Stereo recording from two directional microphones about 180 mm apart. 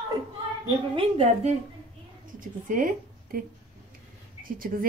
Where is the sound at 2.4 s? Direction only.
50° right (ahead or behind).